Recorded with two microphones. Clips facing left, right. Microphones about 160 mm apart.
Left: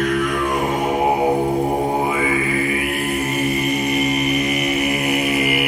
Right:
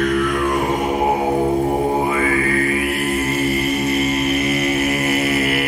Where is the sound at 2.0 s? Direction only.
15° left (ahead or behind).